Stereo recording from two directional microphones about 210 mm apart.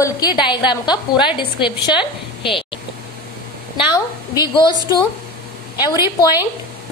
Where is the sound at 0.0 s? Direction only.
20° left (ahead or behind).